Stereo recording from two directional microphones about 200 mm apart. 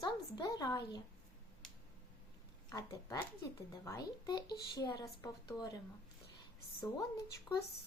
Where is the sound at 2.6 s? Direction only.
20° left (ahead or behind).